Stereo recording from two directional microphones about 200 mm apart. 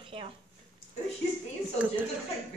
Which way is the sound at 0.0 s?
25° right (ahead or behind).